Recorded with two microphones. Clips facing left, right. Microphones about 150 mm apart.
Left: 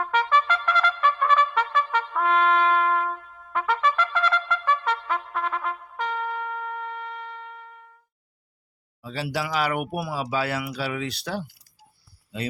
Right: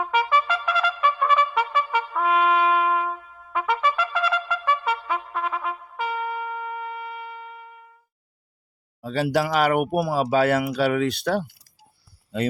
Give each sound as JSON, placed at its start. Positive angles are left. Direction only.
{"t": 0.0, "sound": "trumpet", "side_deg": -10}
{"t": 9.0, "sound": "speech", "side_deg": -50}